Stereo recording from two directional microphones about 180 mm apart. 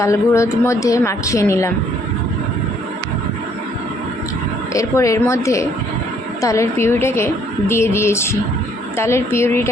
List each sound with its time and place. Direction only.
0.0 s a woman's voice: 15° left (ahead or behind)
4.7 s a woman's voice: 15° left (ahead or behind)